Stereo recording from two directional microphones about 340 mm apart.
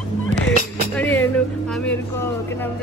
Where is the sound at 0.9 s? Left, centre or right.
Centre.